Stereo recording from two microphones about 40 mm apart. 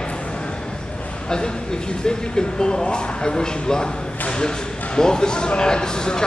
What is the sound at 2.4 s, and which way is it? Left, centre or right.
Speech, centre.